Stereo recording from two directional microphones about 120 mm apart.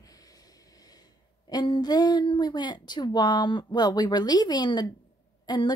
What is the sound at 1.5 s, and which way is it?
A woman's voice, 35° left (ahead or behind).